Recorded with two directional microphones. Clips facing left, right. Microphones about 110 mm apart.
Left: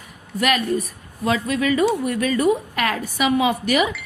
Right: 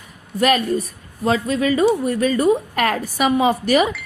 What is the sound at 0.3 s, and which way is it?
Speech, 35° right (ahead or behind).